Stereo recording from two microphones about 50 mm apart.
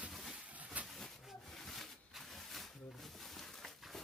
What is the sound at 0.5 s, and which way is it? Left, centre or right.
Train, right.